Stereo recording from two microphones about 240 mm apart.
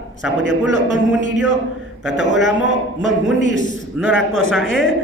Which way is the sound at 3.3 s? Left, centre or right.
Left.